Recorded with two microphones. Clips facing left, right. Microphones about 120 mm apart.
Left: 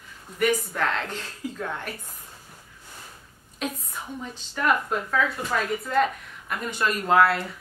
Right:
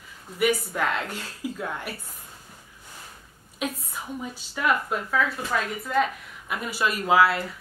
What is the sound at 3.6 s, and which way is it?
A woman's voice, 10° right (ahead or behind).